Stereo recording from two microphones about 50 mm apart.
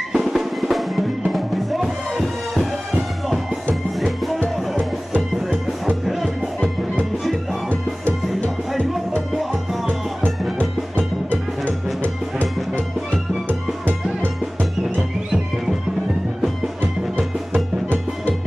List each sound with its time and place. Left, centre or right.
0.1 s music: centre
6.0 s music: centre
11.0 s music: left
13.5 s music: right